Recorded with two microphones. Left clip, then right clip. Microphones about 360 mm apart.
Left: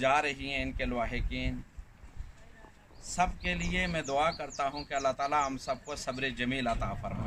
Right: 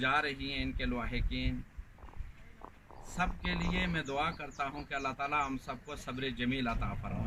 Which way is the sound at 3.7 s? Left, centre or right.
Centre.